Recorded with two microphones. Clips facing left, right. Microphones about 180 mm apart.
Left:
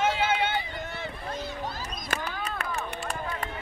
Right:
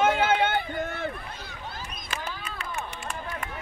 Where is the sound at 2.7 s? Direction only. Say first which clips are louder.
Left 2 dB; 40° left (ahead or behind).